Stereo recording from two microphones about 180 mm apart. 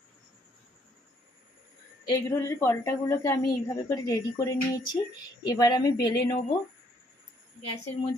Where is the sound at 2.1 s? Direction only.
15° left (ahead or behind).